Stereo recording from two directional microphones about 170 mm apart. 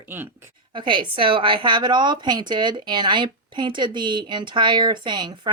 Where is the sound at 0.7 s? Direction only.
30° right (ahead or behind).